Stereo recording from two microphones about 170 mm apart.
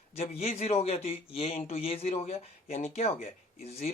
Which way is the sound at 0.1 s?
35° left (ahead or behind).